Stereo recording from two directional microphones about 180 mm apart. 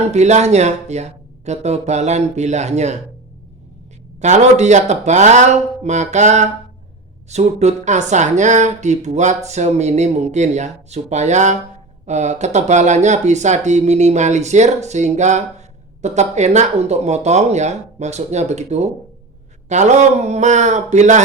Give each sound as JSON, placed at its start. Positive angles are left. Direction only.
{"t": 0.1, "sound": "speech", "side_deg": -40}
{"t": 4.2, "sound": "speech", "side_deg": -40}